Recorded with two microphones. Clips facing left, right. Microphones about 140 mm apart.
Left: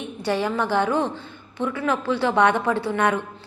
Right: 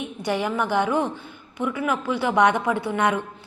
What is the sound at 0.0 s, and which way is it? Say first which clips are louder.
A woman's voice: left 1 dB; 15° right (ahead or behind).